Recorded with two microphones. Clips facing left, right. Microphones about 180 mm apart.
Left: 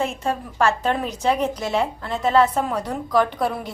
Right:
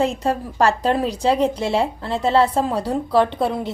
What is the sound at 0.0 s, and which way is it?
A woman's voice, 35° right (ahead or behind).